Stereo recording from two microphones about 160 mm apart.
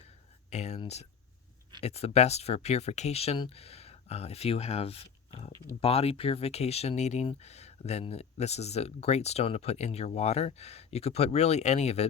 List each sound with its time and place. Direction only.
0.5 s speech: 45° left (ahead or behind)
1.8 s speech: 40° left (ahead or behind)